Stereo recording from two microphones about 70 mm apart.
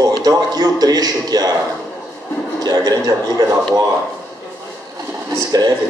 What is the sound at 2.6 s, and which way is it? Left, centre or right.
A man's voice, right.